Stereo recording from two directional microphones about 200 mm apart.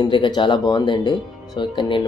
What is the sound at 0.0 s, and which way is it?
Speech, 20° left (ahead or behind).